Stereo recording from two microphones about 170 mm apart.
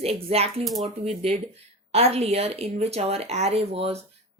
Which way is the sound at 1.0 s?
35° right (ahead or behind).